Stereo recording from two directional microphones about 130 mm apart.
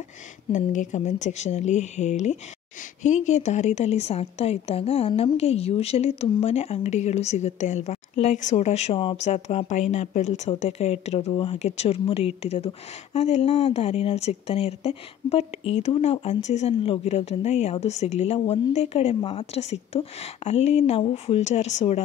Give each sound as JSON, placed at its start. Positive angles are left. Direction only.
{"t": 0.5, "sound": "a woman's voice", "side_deg": 75}